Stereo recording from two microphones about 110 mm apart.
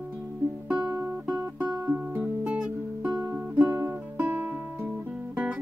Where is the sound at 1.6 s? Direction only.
15° right (ahead or behind).